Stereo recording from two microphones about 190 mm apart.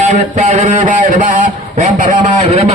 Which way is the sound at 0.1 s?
45° right (ahead or behind).